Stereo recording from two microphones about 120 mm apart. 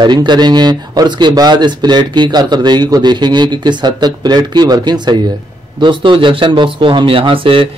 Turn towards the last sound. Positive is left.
turn(degrees=-50)  # may be behind; listen again after turning